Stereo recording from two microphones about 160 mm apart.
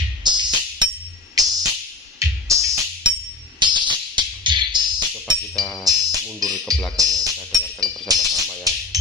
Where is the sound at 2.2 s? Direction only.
20° right (ahead or behind).